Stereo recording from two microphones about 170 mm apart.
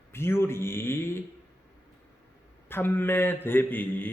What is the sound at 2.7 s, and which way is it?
A man's voice, 10° left (ahead or behind).